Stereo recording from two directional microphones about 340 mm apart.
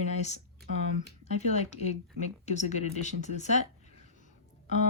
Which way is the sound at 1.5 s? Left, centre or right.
Centre.